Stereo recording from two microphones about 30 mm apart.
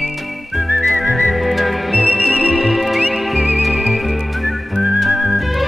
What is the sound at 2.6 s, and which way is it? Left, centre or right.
Music, centre.